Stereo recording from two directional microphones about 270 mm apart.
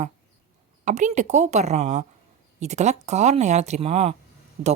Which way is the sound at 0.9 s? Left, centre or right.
Right.